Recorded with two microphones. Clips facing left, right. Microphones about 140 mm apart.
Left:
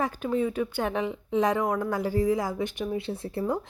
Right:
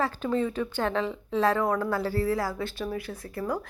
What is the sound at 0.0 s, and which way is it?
A woman's voice, 10° left (ahead or behind).